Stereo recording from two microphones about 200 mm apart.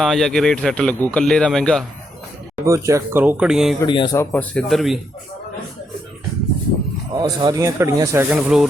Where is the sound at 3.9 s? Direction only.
25° left (ahead or behind).